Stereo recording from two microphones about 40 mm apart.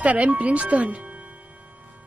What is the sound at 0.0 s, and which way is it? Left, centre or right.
Speech, right.